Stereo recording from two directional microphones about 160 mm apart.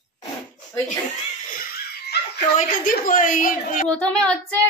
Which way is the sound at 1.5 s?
70° left (ahead or behind).